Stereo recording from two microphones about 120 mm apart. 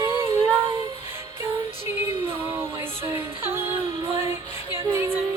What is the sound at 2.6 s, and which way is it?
Music, 20° right (ahead or behind).